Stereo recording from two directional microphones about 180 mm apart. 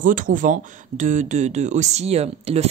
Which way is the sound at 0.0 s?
50° right (ahead or behind).